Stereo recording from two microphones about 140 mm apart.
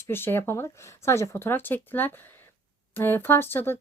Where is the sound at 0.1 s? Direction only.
15° left (ahead or behind).